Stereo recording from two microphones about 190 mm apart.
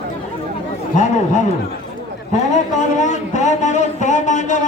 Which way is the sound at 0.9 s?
40° left (ahead or behind).